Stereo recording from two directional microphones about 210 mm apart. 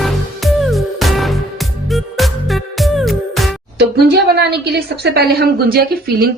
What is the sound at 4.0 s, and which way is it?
A woman's voice, 50° right (ahead or behind).